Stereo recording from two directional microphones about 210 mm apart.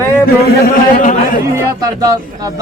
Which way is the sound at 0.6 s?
40° left (ahead or behind).